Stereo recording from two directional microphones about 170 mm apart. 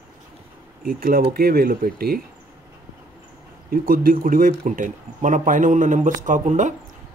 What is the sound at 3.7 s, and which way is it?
Speech, 55° right (ahead or behind).